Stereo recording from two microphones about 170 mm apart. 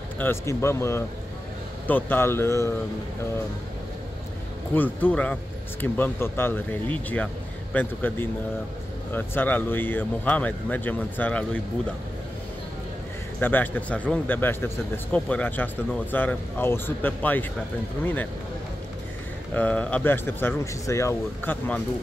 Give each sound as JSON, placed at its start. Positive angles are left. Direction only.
{"t": 0.2, "sound": "speech", "side_deg": 15}
{"t": 4.7, "sound": "speech", "side_deg": 10}
{"t": 13.4, "sound": "speech", "side_deg": 10}
{"t": 19.5, "sound": "speech", "side_deg": 10}